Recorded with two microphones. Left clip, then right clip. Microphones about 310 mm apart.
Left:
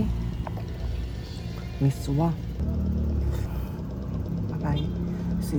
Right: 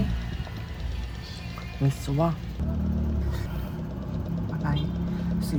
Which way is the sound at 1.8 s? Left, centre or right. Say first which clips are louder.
Right 1 dB; centre.